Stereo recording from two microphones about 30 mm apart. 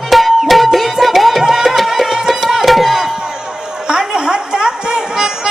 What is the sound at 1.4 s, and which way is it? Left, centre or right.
Music, centre.